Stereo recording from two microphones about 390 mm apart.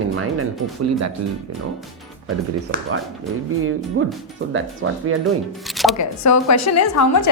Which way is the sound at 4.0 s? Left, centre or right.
Right.